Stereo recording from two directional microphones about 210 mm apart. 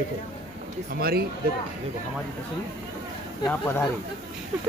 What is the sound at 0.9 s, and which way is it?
Speech, 45° right (ahead or behind).